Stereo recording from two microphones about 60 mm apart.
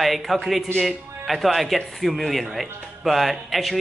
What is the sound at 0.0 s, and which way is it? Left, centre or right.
Speech, centre.